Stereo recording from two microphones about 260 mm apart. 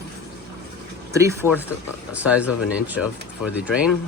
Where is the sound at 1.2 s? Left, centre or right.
Centre.